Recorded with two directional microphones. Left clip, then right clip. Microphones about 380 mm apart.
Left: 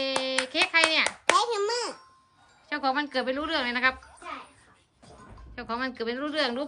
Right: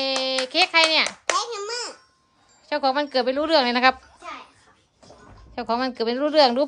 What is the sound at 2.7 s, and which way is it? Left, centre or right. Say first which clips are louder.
Speech: right 5 dB; centre.